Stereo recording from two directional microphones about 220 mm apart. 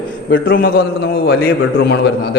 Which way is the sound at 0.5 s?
40° left (ahead or behind).